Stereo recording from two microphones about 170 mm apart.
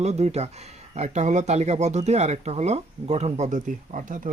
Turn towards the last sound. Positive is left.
turn(degrees=-50)  # may be behind; listen again after turning